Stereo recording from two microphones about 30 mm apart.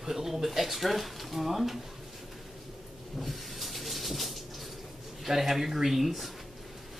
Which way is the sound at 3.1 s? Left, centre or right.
Centre.